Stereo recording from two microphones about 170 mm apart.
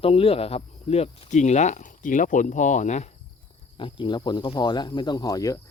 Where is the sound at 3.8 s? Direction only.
30° left (ahead or behind).